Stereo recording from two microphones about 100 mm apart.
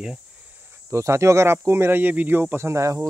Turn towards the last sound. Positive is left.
turn(degrees=-30)  # may be behind; listen again after turning